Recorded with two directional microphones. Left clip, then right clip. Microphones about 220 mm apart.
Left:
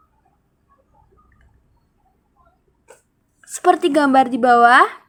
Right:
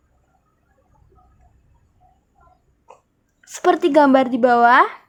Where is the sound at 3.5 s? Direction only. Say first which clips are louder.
Left 1 dB; 15° right (ahead or behind).